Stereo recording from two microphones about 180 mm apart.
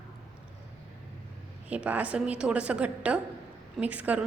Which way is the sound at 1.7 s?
10° right (ahead or behind).